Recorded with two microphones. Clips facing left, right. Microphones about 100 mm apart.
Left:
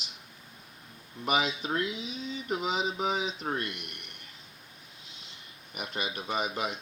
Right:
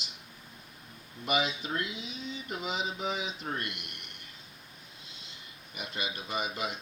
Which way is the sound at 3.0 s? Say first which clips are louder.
Left 4 dB; 50° left (ahead or behind).